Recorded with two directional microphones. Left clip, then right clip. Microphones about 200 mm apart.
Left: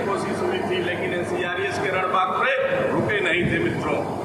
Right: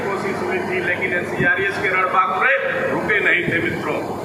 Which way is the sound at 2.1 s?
55° left (ahead or behind).